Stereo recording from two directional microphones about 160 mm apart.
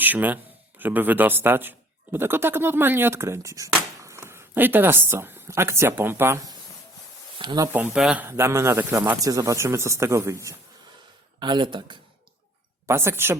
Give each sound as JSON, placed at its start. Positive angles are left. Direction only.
{"t": 0.0, "sound": "speech", "side_deg": -10}
{"t": 7.7, "sound": "speech", "side_deg": -10}
{"t": 11.3, "sound": "speech", "side_deg": -30}
{"t": 12.9, "sound": "speech", "side_deg": -15}